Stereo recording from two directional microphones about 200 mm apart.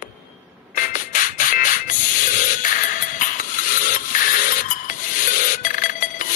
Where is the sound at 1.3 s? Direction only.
40° left (ahead or behind).